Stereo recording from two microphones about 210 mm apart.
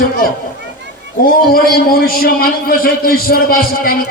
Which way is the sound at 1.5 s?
45° left (ahead or behind).